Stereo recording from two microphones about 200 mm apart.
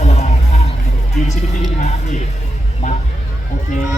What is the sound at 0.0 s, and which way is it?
Music, 35° left (ahead or behind).